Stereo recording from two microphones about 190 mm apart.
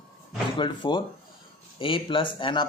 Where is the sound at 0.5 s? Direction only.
25° left (ahead or behind).